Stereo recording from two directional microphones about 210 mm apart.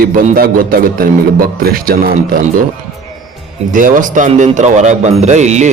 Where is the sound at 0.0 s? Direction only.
45° right (ahead or behind).